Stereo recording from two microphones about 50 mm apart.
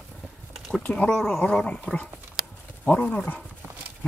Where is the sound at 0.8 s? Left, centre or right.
Left.